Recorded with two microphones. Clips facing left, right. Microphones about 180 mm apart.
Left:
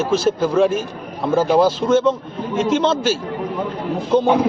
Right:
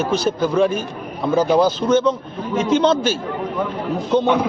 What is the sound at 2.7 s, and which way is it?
Speech, centre (ahead or behind).